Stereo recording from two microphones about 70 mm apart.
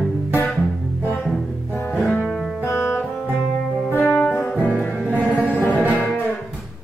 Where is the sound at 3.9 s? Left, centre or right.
Left.